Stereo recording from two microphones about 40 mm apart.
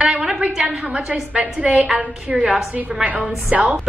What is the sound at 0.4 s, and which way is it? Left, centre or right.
A woman's voice, right.